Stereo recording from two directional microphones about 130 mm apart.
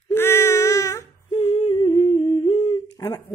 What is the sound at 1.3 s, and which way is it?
Humming, 40° left (ahead or behind).